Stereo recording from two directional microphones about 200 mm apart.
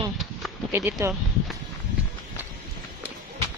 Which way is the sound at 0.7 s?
10° right (ahead or behind).